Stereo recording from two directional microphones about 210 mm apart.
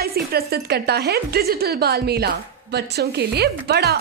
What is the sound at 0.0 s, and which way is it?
Speech, 45° right (ahead or behind).